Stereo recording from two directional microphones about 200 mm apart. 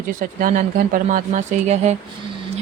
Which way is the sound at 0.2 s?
45° right (ahead or behind).